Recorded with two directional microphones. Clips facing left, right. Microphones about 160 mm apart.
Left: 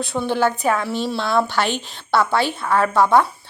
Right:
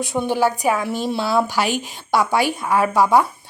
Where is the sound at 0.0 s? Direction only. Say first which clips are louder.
Right 1 dB; 15° right (ahead or behind).